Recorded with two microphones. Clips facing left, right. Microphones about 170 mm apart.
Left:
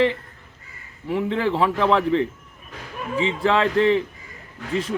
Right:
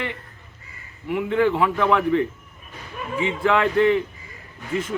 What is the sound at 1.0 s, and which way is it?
A man's voice, 30° left (ahead or behind).